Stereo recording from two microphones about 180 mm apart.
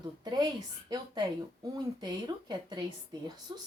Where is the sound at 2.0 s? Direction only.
25° right (ahead or behind).